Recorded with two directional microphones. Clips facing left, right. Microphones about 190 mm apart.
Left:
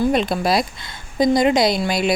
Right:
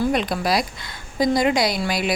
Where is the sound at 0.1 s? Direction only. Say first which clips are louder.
Left 3 dB; 25° left (ahead or behind).